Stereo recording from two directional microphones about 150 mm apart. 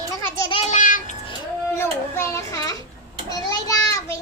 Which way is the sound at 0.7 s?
60° left (ahead or behind).